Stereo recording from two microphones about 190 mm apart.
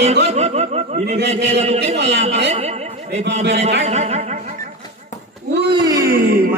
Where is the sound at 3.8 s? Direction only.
35° right (ahead or behind).